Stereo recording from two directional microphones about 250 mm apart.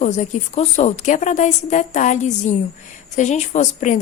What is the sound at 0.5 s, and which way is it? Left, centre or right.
A woman's voice, left.